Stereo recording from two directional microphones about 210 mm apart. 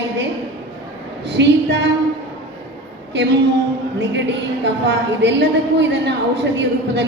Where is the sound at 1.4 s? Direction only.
55° right (ahead or behind).